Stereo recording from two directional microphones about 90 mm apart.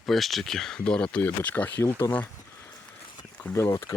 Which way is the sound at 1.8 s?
30° left (ahead or behind).